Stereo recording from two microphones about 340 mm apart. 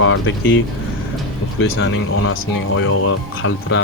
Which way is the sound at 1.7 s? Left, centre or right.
Left.